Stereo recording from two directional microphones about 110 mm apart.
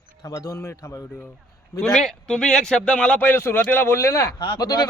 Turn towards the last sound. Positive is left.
turn(degrees=35)  # may be behind; listen again after turning